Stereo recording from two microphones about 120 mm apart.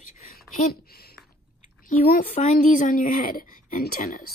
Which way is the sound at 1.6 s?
90° left.